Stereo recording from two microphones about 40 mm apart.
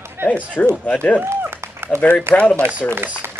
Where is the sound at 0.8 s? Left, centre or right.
Left.